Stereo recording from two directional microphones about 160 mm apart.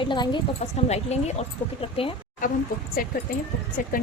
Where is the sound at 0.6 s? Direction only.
40° left (ahead or behind).